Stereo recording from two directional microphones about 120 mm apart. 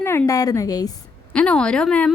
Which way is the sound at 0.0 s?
20° left (ahead or behind).